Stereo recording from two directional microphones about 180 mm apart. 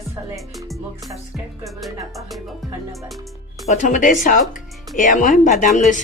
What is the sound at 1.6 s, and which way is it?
Speech, centre (ahead or behind).